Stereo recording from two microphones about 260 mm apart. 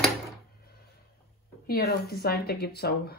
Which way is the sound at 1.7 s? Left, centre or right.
Left.